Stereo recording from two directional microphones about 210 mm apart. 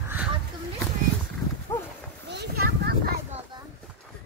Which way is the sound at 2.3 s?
45° right (ahead or behind).